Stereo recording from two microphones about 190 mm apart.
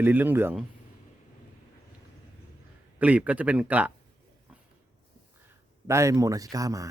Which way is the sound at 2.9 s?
10° right (ahead or behind).